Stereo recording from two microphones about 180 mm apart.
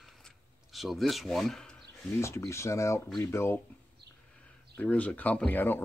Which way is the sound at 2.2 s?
15° left (ahead or behind).